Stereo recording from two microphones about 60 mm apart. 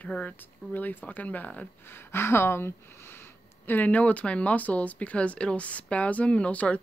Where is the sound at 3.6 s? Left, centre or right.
Left.